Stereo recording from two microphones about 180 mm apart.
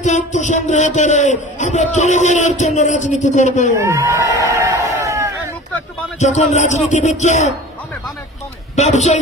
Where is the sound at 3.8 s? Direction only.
15° right (ahead or behind).